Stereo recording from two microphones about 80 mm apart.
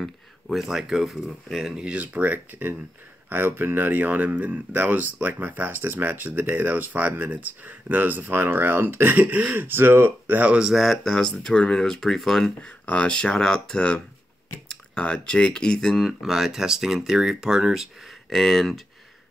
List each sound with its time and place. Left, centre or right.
0.0 s speech: centre
10.7 s speech: centre